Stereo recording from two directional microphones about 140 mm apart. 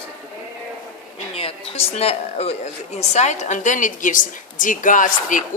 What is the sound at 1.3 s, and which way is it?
Speech, 45° left (ahead or behind).